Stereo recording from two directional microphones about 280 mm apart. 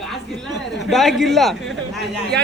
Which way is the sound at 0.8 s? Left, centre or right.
Centre.